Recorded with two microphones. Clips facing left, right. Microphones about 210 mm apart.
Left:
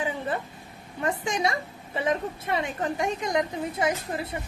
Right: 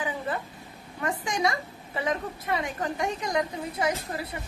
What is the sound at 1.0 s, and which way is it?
A woman's voice, 25° left (ahead or behind).